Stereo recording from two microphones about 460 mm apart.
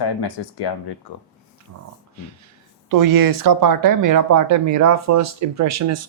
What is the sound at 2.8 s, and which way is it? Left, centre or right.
Speech, right.